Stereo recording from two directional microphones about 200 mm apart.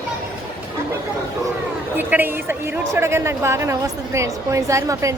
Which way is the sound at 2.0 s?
10° right (ahead or behind).